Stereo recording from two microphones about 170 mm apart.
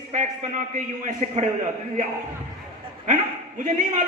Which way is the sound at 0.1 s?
45° right (ahead or behind).